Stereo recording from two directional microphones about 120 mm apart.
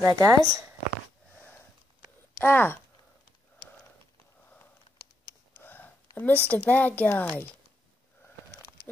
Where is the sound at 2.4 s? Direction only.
15° left (ahead or behind).